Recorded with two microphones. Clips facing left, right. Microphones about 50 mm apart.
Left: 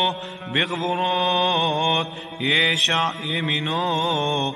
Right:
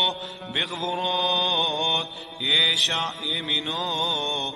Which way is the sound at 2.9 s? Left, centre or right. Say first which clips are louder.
Left 5 dB; left.